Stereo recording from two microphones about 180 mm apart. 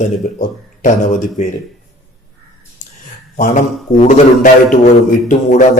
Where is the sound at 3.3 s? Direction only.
45° left (ahead or behind).